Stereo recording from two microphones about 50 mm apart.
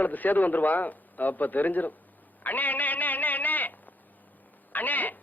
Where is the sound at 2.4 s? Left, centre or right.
Left.